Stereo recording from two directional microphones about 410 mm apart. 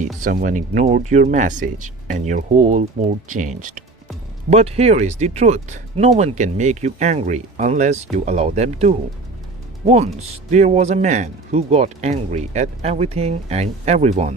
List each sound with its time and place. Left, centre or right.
0.3 s speech: centre